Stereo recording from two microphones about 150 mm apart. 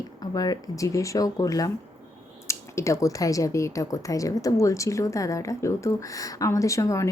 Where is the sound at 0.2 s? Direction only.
25° left (ahead or behind).